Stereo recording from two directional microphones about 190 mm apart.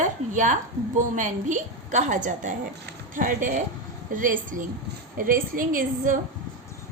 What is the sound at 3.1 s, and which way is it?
A woman's voice, 45° right (ahead or behind).